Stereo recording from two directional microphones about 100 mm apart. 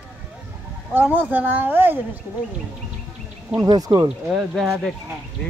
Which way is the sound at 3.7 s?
40° right (ahead or behind).